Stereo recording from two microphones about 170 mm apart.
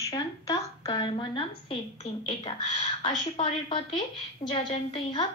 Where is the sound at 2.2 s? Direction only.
30° left (ahead or behind).